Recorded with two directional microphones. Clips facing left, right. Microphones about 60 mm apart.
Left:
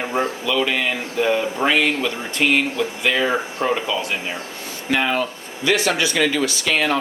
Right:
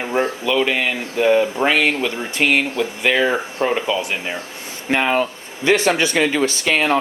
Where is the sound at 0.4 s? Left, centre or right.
Right.